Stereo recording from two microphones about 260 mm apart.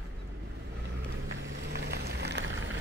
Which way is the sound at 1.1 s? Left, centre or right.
Right.